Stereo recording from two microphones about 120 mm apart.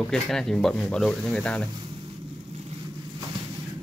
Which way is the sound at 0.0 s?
5° left (ahead or behind).